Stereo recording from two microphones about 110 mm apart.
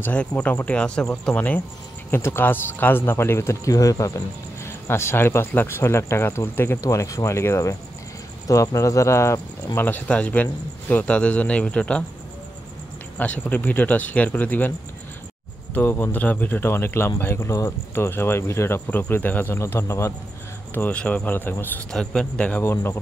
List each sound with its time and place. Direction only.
0.0 s speech: 10° left (ahead or behind)
13.2 s speech: 15° left (ahead or behind)
15.7 s speech: 20° left (ahead or behind)
20.7 s speech: 15° left (ahead or behind)
21.9 s speech: 5° left (ahead or behind)
22.6 s speech: 20° left (ahead or behind)